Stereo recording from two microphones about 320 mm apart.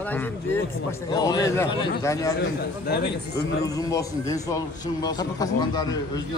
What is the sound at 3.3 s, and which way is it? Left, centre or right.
A man's voice, centre.